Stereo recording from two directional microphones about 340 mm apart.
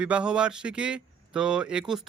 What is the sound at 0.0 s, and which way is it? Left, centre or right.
Speech, centre.